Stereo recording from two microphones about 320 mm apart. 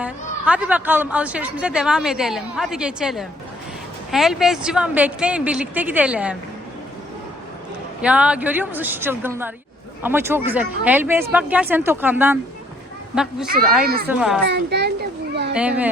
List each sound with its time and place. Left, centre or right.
0.0 s a woman's voice: centre
8.0 s a woman's voice: centre
13.8 s speech: right
14.1 s a woman's voice: centre
14.5 s a child's voice: right
15.5 s a woman's voice: centre